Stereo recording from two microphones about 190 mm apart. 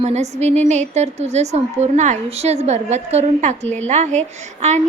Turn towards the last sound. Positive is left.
turn(degrees=-35)  # may be behind; listen again after turning